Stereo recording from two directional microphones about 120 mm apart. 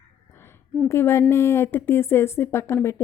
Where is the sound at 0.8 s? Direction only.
20° left (ahead or behind).